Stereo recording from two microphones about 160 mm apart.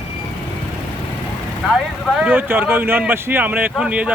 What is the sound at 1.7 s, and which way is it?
Mantra, 5° right (ahead or behind).